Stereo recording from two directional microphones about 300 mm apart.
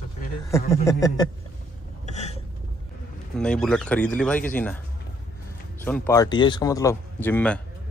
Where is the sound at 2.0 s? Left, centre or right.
Left.